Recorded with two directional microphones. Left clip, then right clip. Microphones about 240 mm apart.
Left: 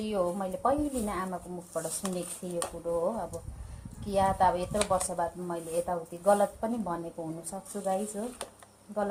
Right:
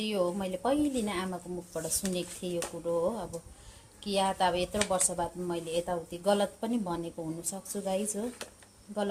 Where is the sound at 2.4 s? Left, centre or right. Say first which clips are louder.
Right 3 dB; right.